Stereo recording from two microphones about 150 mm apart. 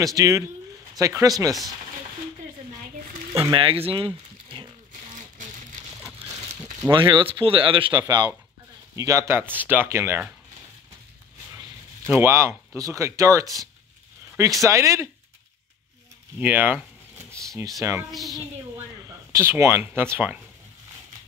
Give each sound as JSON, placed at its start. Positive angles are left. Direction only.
{"t": 0.0, "sound": "speech", "side_deg": -20}
{"t": 3.5, "sound": "speech", "side_deg": -35}
{"t": 5.1, "sound": "music", "side_deg": -55}
{"t": 6.8, "sound": "speech", "side_deg": -30}
{"t": 12.1, "sound": "speech", "side_deg": -15}
{"t": 14.6, "sound": "speech", "side_deg": -20}
{"t": 16.3, "sound": "speech", "side_deg": -10}
{"t": 18.1, "sound": "speech", "side_deg": 0}
{"t": 19.0, "sound": "speech", "side_deg": -15}